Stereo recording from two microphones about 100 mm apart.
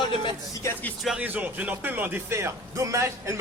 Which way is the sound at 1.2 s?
15° right (ahead or behind).